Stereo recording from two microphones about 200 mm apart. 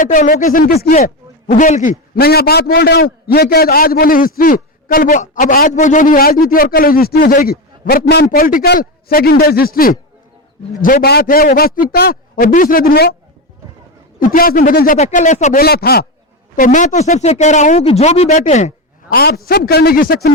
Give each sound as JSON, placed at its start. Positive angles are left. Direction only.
{"t": 0.0, "sound": "a man's voice", "side_deg": 40}
{"t": 14.2, "sound": "a man's voice", "side_deg": 45}
{"t": 15.6, "sound": "a man's voice", "side_deg": 50}
{"t": 16.6, "sound": "speech", "side_deg": 40}
{"t": 19.1, "sound": "a man's voice", "side_deg": 50}